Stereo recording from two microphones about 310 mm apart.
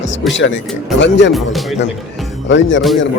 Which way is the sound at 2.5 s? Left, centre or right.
Left.